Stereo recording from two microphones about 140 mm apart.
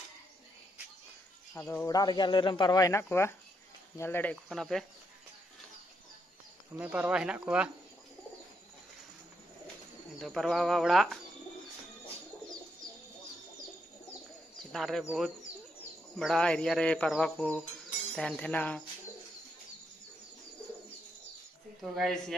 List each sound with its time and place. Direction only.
1.5 s speech: 15° left (ahead or behind)
1.9 s speech: 30° left (ahead or behind); by 4.4 s 15° left (ahead or behind)
4.5 s speech: centre (ahead or behind)
6.8 s speech: 10° right (ahead or behind)
10.2 s speech: centre (ahead or behind)
14.6 s speech: centre (ahead or behind)
21.8 s speech: centre (ahead or behind)